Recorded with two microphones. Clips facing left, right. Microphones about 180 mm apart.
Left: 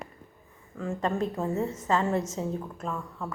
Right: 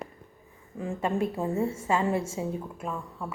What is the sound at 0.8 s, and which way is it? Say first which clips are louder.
A woman's voice: even; 15° right (ahead or behind).